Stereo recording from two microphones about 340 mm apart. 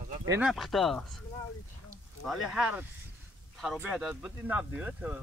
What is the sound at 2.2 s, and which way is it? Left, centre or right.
Speech, centre.